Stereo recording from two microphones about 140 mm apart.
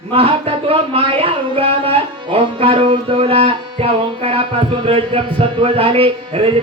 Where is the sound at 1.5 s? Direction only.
40° right (ahead or behind).